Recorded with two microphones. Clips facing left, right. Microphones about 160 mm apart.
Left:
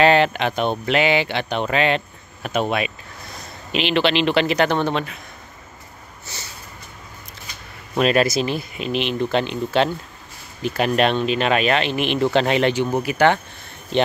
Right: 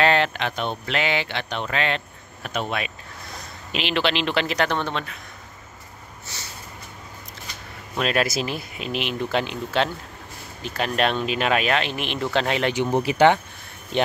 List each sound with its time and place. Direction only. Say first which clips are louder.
0.0 s speech: left 5 dB; 10° left (ahead or behind)
3.7 s speech: left 5 dB; centre (ahead or behind)
8.0 s speech: left 5 dB; centre (ahead or behind)
12.9 s speech: right 5 dB; 25° right (ahead or behind)